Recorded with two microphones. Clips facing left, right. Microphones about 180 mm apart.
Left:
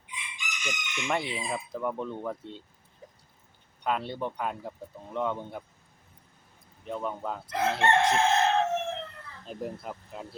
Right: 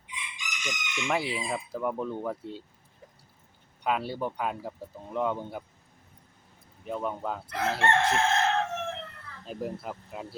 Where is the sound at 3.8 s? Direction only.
5° right (ahead or behind).